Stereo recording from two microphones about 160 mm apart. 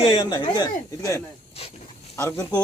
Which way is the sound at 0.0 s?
30° left (ahead or behind).